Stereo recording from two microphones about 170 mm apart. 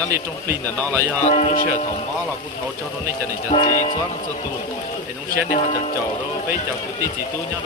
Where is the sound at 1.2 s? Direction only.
40° left (ahead or behind).